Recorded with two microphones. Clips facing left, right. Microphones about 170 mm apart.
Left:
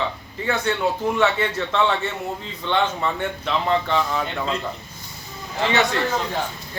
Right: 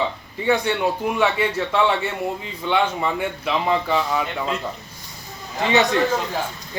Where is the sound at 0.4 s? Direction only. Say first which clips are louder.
Right 2 dB; 15° right (ahead or behind).